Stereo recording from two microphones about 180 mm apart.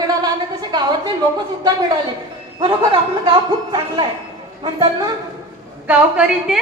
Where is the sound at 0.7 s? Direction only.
25° right (ahead or behind).